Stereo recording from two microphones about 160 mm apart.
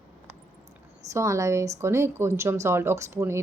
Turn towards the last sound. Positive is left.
turn(degrees=-15)  # may be behind; listen again after turning